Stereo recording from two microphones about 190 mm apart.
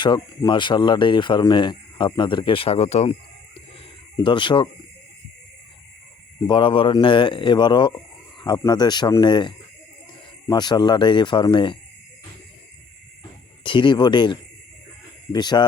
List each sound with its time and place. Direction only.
0.0 s speech: 25° left (ahead or behind)
4.2 s speech: 25° left (ahead or behind)
6.5 s speech: 25° left (ahead or behind)
10.5 s speech: 20° left (ahead or behind)
13.7 s speech: 25° left (ahead or behind)